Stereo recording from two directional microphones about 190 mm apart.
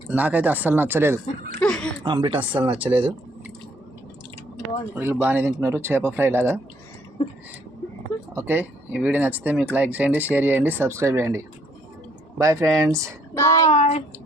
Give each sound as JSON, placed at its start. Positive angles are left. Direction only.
{"t": 0.1, "sound": "speech", "side_deg": -10}
{"t": 1.6, "sound": "a sound", "side_deg": 5}
{"t": 2.0, "sound": "speech", "side_deg": -25}
{"t": 4.9, "sound": "speech", "side_deg": -10}
{"t": 8.4, "sound": "speech", "side_deg": -10}
{"t": 13.3, "sound": "speech", "side_deg": 15}
{"t": 13.7, "sound": "speech", "side_deg": 35}